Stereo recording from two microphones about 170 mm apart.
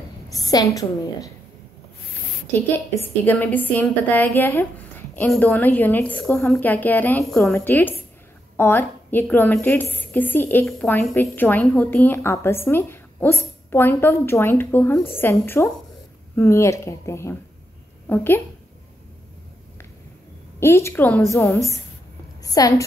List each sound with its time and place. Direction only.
0.3 s a woman's voice: 20° left (ahead or behind)
3.0 s a woman's voice: 10° left (ahead or behind)
20.5 s a woman's voice: 15° left (ahead or behind)
22.4 s a woman's voice: 20° left (ahead or behind)